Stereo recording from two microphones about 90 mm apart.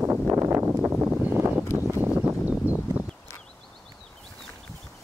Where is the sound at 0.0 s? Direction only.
25° right (ahead or behind).